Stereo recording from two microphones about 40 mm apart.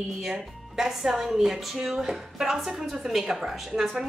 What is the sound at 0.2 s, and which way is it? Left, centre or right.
A woman's voice, centre.